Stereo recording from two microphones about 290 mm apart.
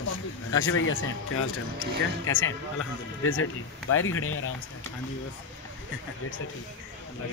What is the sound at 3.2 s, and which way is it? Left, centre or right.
Speech, left.